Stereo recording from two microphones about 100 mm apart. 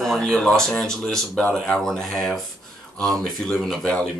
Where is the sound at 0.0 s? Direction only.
5° left (ahead or behind).